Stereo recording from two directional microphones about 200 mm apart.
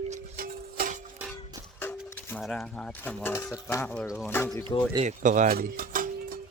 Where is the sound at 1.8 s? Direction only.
10° left (ahead or behind).